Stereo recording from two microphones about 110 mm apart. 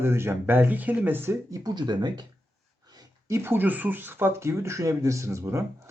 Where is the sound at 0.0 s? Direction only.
20° right (ahead or behind).